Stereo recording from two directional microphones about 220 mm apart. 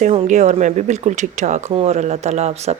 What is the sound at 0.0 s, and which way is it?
Speech, 30° right (ahead or behind).